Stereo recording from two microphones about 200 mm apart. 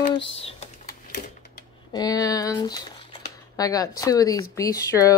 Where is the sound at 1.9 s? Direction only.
20° left (ahead or behind).